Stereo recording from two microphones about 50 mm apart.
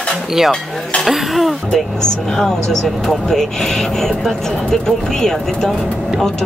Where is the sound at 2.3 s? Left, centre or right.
Centre.